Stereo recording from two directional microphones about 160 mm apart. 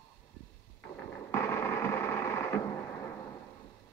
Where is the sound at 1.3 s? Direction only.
15° left (ahead or behind).